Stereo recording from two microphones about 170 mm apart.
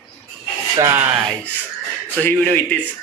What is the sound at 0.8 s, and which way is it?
Speech, 15° right (ahead or behind).